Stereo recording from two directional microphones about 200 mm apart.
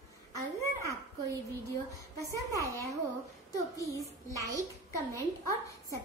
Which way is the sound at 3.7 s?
15° left (ahead or behind).